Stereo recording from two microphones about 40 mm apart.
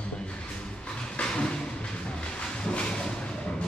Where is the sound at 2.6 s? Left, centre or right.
Left.